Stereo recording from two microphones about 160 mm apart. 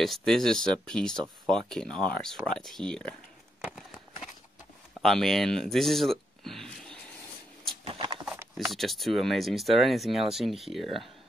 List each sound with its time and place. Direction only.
0.0 s speech: centre (ahead or behind)
5.0 s speech: centre (ahead or behind)
7.8 s a sound: 35° right (ahead or behind)
8.5 s speech: centre (ahead or behind)